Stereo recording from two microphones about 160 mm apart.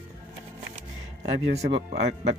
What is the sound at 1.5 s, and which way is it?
Speech, 40° right (ahead or behind).